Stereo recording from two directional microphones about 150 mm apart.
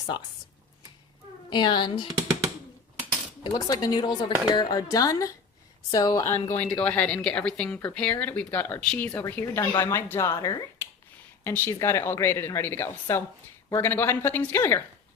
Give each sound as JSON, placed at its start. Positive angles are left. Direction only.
{"t": 1.5, "sound": "a woman's voice", "side_deg": 30}
{"t": 2.0, "sound": "speech", "side_deg": -20}
{"t": 3.4, "sound": "speech", "side_deg": 25}